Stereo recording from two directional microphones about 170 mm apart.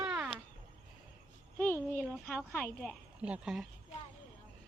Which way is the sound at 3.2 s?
10° right (ahead or behind).